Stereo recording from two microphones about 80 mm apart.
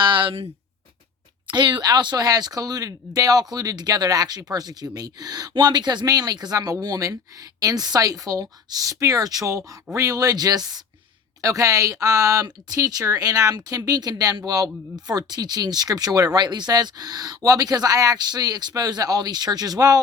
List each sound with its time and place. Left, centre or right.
0.0 s a sound: right
1.5 s a woman's voice: right
11.4 s a woman's voice: right